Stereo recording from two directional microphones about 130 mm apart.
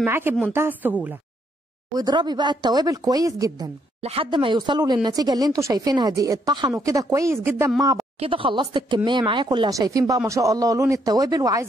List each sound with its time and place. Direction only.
0.0 s a woman's voice: 15° right (ahead or behind)
2.0 s speech: 35° right (ahead or behind)
4.0 s speech: 45° right (ahead or behind); by 7.7 s 20° right (ahead or behind)
8.2 s speech: 45° right (ahead or behind)
9.8 s speech: 25° right (ahead or behind)